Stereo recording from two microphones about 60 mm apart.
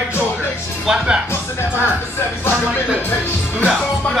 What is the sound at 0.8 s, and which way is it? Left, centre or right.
Speech, centre.